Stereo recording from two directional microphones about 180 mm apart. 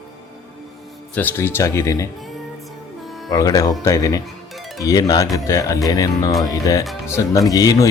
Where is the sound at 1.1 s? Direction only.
10° left (ahead or behind).